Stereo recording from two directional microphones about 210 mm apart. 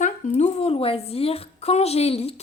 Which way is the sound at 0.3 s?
30° left (ahead or behind).